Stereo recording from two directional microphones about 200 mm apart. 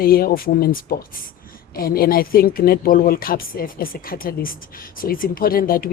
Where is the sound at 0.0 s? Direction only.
50° left (ahead or behind).